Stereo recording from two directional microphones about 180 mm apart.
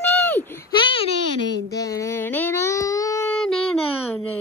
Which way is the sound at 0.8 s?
30° left (ahead or behind).